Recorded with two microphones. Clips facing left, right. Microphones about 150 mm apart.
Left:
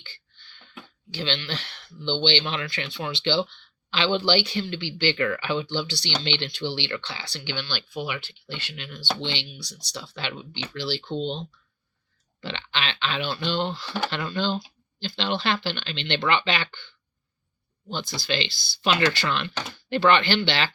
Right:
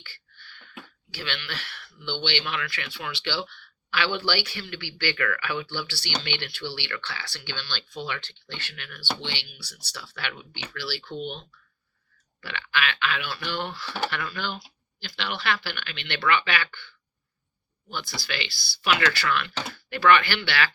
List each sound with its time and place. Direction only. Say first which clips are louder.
0.0 s speech: right 1 dB; 20° left (ahead or behind)